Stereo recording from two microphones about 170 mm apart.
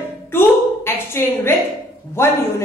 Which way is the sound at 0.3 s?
15° left (ahead or behind).